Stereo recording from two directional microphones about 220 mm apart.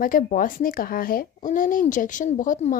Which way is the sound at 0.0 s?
40° left (ahead or behind).